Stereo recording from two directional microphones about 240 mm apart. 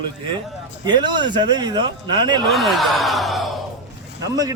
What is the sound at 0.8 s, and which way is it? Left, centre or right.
Speech, centre.